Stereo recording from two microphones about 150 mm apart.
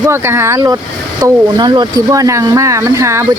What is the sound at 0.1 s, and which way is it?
Speech, 15° right (ahead or behind).